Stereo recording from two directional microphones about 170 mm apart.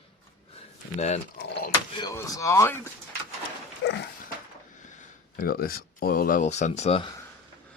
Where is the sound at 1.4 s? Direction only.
70° left (ahead or behind).